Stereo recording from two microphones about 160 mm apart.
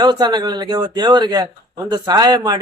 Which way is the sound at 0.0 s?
25° right (ahead or behind).